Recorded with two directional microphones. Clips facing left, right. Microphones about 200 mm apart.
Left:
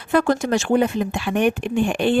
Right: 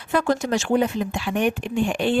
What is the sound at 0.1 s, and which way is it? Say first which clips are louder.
Speech: left 3 dB; 55° left (ahead or behind).